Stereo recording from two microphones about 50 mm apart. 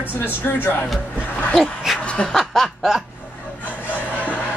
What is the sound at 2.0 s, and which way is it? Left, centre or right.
Snicker, left.